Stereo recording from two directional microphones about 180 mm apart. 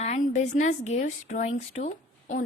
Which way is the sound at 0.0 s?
40° left (ahead or behind).